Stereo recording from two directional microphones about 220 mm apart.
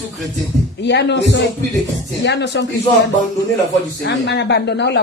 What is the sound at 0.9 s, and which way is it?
Speech, 50° left (ahead or behind).